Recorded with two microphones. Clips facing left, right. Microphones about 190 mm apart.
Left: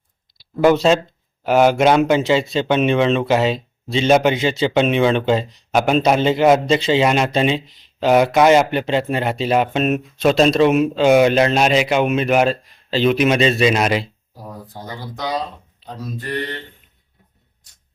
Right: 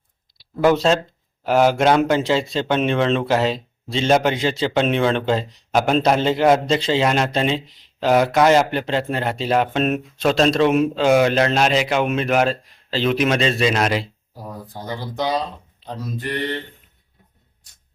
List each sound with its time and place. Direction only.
0.8 s speech: 10° left (ahead or behind)
10.9 s speech: 20° left (ahead or behind)